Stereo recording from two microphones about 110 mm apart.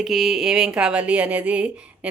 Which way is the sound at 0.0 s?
Centre (ahead or behind).